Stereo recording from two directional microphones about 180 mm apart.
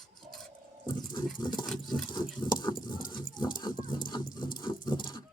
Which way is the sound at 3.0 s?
50° left (ahead or behind).